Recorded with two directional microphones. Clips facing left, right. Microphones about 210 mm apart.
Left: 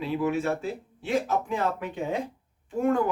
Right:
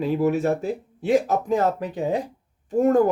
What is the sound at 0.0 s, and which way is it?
Speech, 40° right (ahead or behind).